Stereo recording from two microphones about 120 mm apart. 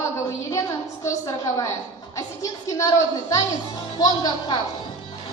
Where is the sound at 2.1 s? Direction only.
30° left (ahead or behind).